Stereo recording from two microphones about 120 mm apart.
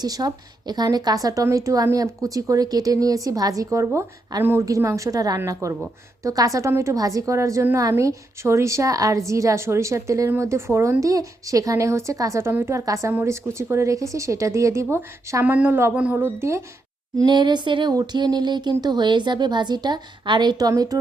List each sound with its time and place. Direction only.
0.0 s a woman's voice: 30° right (ahead or behind)
17.2 s speech: 40° right (ahead or behind)